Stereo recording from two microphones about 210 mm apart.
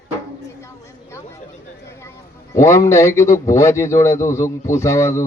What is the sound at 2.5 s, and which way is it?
Speech, 15° left (ahead or behind).